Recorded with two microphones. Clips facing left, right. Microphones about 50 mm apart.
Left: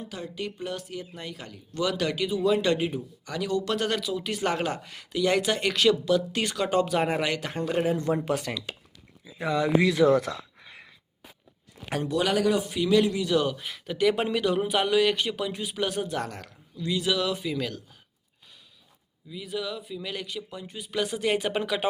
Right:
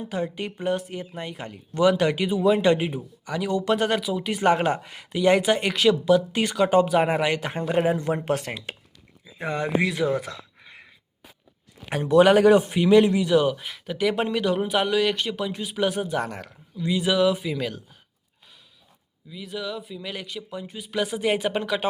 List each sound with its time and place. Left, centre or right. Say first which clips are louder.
0.0 s speech: right 6 dB; right
8.2 s speech: right 2 dB; right
9.9 s speech: left 4 dB; centre
11.9 s speech: right 9 dB; right
13.2 s speech: right 5 dB; centre
19.3 s speech: right 1 dB; centre